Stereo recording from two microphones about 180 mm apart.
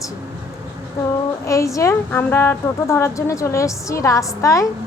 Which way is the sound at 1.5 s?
15° left (ahead or behind).